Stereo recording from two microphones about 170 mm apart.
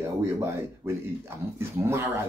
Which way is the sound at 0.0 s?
15° right (ahead or behind).